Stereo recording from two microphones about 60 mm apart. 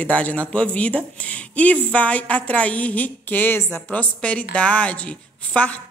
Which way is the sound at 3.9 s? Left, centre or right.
Left.